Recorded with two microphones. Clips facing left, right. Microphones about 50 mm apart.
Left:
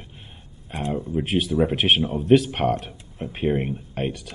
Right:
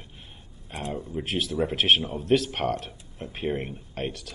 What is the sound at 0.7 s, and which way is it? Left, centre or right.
Speech, left.